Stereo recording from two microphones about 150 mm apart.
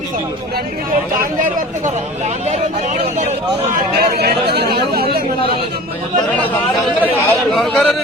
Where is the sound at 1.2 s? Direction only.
60° right (ahead or behind); by 3.6 s 45° right (ahead or behind).